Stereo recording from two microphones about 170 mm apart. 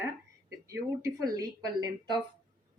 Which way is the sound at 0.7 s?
20° right (ahead or behind).